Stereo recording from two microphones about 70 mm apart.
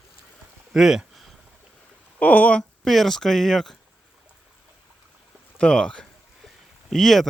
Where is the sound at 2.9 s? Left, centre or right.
Centre.